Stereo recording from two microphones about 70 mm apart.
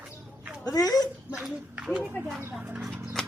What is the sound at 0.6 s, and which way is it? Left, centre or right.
Speech, left.